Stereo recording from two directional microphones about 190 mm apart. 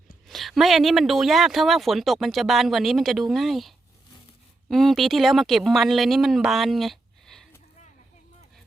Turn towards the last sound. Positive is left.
turn(degrees=0)  # may be behind; listen again after turning